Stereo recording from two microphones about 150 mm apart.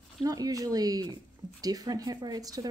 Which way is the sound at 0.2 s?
25° right (ahead or behind).